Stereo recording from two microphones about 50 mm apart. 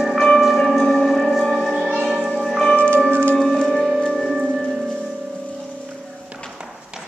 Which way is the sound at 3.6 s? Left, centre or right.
Centre.